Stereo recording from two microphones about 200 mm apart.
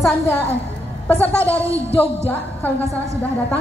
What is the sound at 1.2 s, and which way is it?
Speech, 10° left (ahead or behind).